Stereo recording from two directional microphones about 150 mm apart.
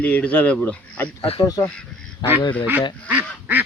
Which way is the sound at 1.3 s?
25° left (ahead or behind).